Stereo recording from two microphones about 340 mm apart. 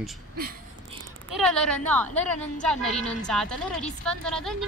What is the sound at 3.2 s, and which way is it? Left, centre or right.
A woman's voice, centre.